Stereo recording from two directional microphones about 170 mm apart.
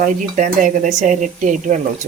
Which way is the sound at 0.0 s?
50° right (ahead or behind).